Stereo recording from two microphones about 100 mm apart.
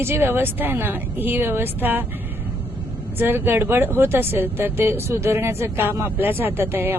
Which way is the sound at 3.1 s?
20° right (ahead or behind).